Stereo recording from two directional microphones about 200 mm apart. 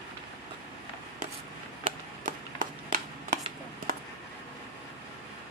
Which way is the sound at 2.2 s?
40° right (ahead or behind).